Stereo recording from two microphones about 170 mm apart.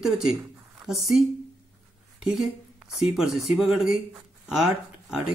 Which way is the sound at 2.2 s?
Centre (ahead or behind).